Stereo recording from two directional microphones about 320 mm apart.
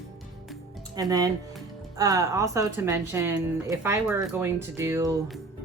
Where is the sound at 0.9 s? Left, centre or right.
Centre.